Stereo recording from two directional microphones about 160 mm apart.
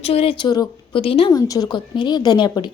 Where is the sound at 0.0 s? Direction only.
35° left (ahead or behind).